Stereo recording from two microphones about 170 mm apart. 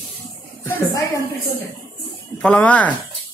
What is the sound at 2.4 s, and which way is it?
Speech, 5° left (ahead or behind).